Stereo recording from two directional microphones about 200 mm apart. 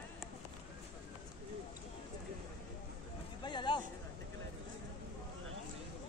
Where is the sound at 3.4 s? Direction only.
25° left (ahead or behind).